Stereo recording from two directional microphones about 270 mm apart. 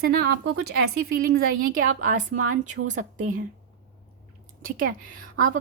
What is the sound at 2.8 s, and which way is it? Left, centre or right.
Speech, right.